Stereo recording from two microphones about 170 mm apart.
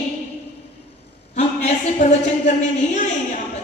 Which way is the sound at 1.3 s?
40° left (ahead or behind).